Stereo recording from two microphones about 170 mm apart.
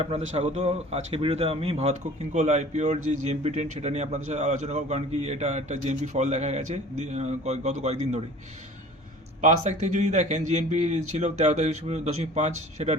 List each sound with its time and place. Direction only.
0.0 s speech: 35° right (ahead or behind)
9.4 s a man's voice: 45° right (ahead or behind)